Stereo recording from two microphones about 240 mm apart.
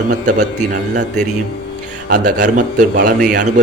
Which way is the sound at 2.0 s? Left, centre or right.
Right.